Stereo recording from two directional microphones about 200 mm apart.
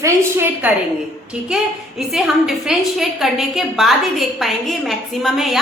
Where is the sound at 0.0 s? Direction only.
10° right (ahead or behind).